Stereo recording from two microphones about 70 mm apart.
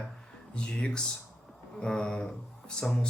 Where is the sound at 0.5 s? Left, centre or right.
Centre.